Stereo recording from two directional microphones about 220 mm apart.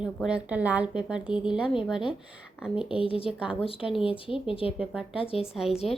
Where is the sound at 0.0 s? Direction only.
5° right (ahead or behind).